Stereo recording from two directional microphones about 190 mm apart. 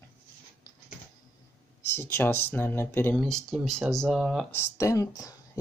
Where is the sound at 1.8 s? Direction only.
10° left (ahead or behind).